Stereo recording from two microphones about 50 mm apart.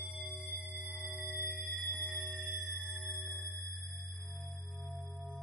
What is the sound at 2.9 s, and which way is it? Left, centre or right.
Sonar, right.